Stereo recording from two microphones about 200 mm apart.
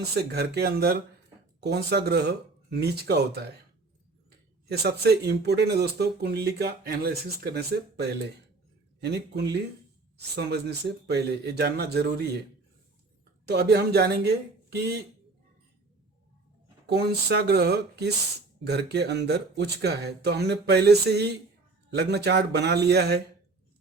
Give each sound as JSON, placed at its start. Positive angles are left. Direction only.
{"t": 0.1, "sound": "speech", "side_deg": -50}
{"t": 4.7, "sound": "speech", "side_deg": -55}
{"t": 13.5, "sound": "speech", "side_deg": -55}
{"t": 16.8, "sound": "speech", "side_deg": -55}